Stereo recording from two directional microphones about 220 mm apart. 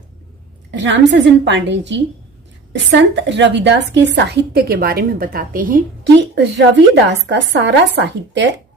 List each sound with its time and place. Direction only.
0.7 s a woman's voice: 55° right (ahead or behind)